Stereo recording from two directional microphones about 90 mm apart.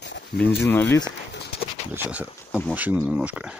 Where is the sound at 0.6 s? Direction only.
25° left (ahead or behind).